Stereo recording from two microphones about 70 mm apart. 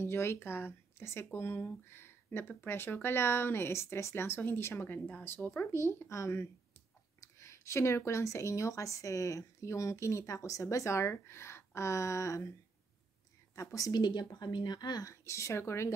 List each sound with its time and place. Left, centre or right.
0.0 s speech: left
5.7 s speech: left
13.6 s speech: left
13.9 s speech: left
15.0 s speech: left